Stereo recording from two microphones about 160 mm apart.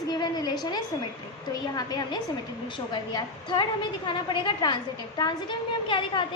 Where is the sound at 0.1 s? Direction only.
25° left (ahead or behind).